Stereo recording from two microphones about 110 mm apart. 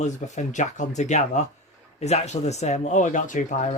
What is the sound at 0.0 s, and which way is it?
A man's voice, 90° left.